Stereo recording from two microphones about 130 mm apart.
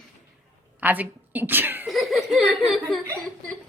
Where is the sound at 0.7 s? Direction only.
15° right (ahead or behind).